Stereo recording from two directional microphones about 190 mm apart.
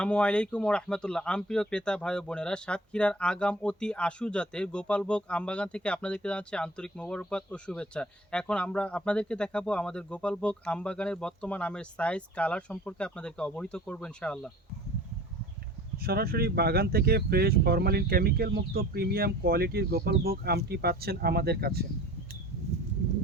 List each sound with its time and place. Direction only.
0.0 s speech: 5° left (ahead or behind)
16.0 s speech: 55° right (ahead or behind)